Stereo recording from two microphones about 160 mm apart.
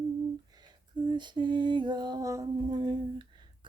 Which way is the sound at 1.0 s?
30° right (ahead or behind).